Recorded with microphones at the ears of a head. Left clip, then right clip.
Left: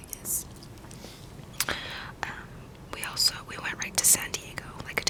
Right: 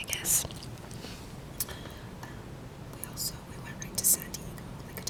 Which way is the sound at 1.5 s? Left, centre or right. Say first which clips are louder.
Left 12 dB; left.